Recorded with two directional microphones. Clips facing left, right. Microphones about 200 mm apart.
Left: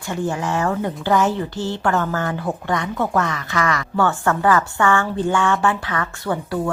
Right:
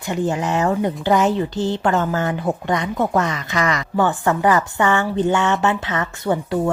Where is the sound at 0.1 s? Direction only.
20° right (ahead or behind).